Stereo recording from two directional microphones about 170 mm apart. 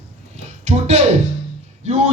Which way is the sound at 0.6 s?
40° right (ahead or behind).